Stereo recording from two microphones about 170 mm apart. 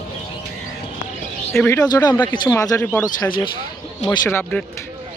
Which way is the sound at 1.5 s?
10° left (ahead or behind).